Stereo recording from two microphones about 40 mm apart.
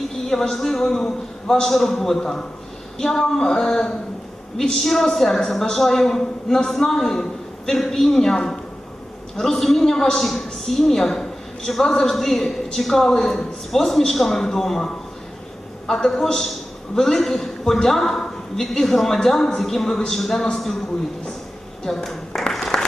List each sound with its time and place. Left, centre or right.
0.3 s a woman's voice: centre
21.8 s a woman's voice: centre
22.3 s applause: centre
22.7 s applause: centre